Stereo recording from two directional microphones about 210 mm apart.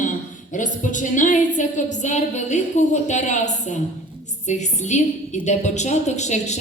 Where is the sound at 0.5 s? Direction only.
35° left (ahead or behind).